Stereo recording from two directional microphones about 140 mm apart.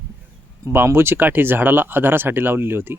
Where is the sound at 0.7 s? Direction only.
15° right (ahead or behind).